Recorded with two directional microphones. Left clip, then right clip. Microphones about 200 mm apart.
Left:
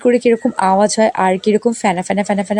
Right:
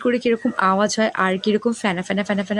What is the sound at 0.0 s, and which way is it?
Speech, 20° left (ahead or behind).